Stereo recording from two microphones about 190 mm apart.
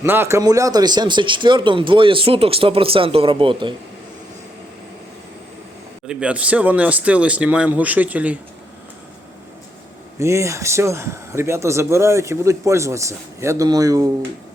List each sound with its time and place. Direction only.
0.0 s speech: 10° right (ahead or behind)
6.1 s a man's voice: 5° right (ahead or behind)
10.2 s a man's voice: 15° right (ahead or behind)